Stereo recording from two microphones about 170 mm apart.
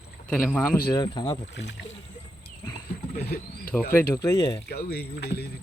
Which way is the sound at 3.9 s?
15° left (ahead or behind).